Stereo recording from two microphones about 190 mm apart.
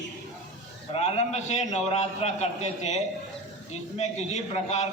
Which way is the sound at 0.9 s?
35° left (ahead or behind).